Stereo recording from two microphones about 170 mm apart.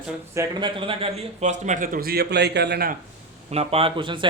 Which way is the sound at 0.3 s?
25° right (ahead or behind).